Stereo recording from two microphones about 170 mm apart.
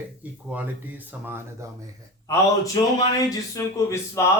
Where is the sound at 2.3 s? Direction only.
20° left (ahead or behind).